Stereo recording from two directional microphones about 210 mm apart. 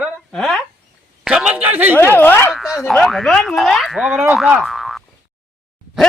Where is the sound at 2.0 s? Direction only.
10° left (ahead or behind).